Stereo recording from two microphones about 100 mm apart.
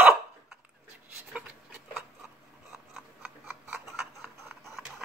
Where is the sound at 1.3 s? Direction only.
10° right (ahead or behind).